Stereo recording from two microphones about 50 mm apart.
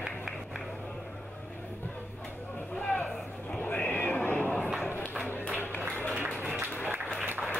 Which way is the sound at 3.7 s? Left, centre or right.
Left.